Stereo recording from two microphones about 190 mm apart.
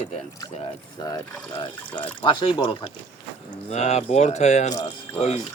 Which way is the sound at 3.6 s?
35° left (ahead or behind).